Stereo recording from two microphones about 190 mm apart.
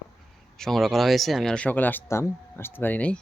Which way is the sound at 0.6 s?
Centre (ahead or behind).